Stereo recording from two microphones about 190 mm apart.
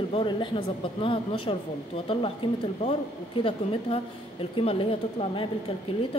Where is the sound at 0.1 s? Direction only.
25° left (ahead or behind).